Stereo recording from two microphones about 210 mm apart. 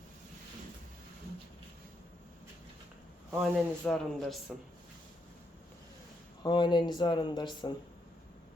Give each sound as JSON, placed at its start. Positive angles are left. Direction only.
{"t": 3.3, "sound": "speech", "side_deg": 0}
{"t": 6.4, "sound": "speech", "side_deg": 20}